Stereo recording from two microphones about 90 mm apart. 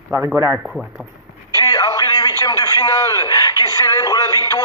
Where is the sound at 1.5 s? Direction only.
40° left (ahead or behind).